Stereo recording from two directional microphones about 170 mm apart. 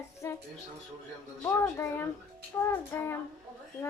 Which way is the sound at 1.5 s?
10° left (ahead or behind).